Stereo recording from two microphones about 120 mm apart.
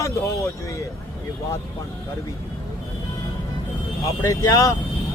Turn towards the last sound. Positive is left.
turn(degrees=25)  # may be behind; listen again after turning